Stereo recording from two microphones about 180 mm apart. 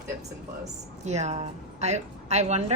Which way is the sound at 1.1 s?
40° right (ahead or behind).